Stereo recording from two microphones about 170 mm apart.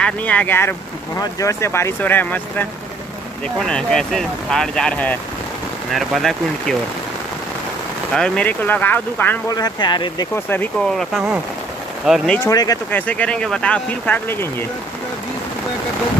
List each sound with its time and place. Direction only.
0.0 s speech: 10° left (ahead or behind)
8.1 s speech: 5° left (ahead or behind)
9.5 s speech: 25° left (ahead or behind)
10.3 s speech: 10° left (ahead or behind)
11.0 s speech: centre (ahead or behind)
12.4 s speech: 20° left (ahead or behind)
12.9 s speech: 10° left (ahead or behind)